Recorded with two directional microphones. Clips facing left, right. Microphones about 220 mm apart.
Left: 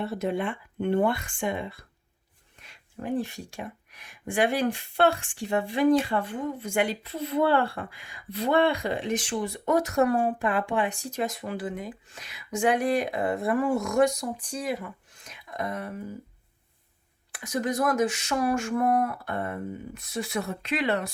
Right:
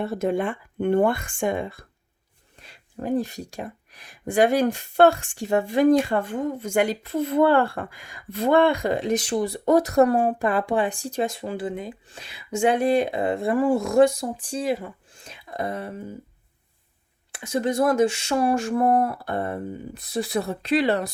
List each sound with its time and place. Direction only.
0.0 s speech: 45° right (ahead or behind)
2.6 s speech: 35° right (ahead or behind)
17.3 s speech: 25° right (ahead or behind)